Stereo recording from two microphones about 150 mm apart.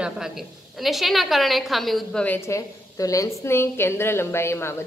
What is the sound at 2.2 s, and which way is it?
A woman's voice, 15° left (ahead or behind).